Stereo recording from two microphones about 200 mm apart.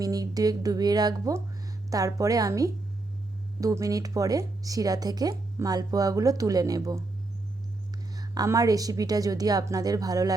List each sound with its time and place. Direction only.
0.0 s speech: 20° right (ahead or behind)
8.1 s speech: 20° right (ahead or behind)